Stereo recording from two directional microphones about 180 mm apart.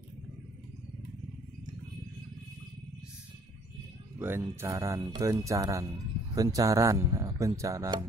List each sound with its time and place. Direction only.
4.2 s speech: 15° right (ahead or behind)